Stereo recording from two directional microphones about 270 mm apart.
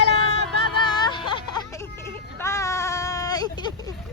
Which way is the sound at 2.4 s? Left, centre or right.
Centre.